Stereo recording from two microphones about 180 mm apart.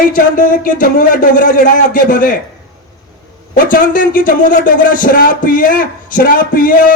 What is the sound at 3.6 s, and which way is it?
A man's voice, 50° left (ahead or behind).